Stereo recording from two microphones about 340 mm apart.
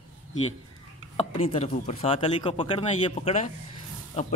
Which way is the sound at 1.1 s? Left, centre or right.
Centre.